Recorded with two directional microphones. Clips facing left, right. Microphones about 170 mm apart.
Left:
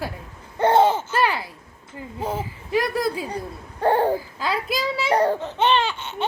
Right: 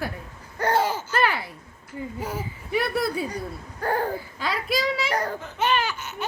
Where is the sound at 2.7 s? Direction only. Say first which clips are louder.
Left 2 dB; 90° left.